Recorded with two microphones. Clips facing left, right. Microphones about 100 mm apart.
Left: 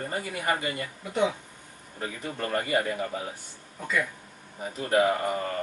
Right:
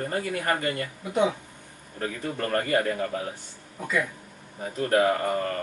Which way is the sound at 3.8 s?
5° right (ahead or behind).